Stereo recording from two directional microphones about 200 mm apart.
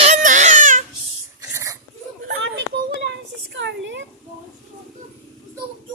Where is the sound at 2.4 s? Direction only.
60° right (ahead or behind).